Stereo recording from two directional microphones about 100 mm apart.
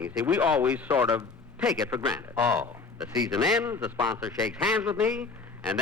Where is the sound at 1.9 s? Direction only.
35° right (ahead or behind).